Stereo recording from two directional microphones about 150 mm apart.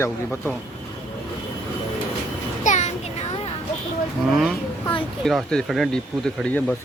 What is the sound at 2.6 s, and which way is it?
Music, 55° left (ahead or behind).